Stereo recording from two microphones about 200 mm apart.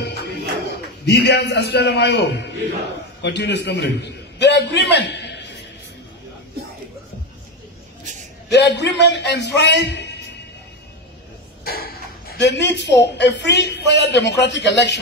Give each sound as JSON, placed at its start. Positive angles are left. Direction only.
{"t": 0.0, "sound": "music", "side_deg": 55}
{"t": 1.0, "sound": "a man's voice", "side_deg": 55}
{"t": 8.0, "sound": "a sound", "side_deg": -40}
{"t": 8.5, "sound": "speech", "side_deg": 60}
{"t": 11.6, "sound": "a sound", "side_deg": 50}
{"t": 13.0, "sound": "speech", "side_deg": 60}